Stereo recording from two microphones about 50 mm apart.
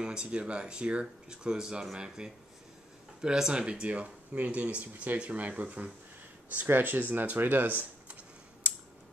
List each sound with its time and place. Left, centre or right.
0.0 s speech: centre; by 8.2 s right
8.6 s scissors: right